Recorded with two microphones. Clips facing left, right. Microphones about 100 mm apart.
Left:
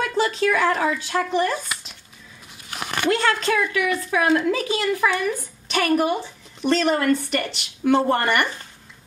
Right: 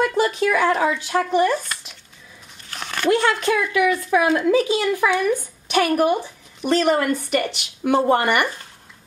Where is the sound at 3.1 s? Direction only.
15° right (ahead or behind).